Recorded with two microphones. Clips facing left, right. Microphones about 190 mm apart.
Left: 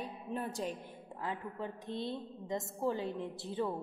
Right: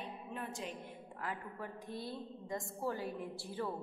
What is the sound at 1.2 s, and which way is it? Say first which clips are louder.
A woman's voice: left 4 dB; 25° left (ahead or behind).